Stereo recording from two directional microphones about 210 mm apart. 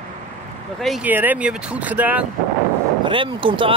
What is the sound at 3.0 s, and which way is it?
Speech, 25° right (ahead or behind).